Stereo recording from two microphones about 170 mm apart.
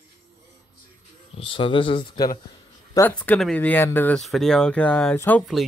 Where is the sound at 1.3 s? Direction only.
30° left (ahead or behind).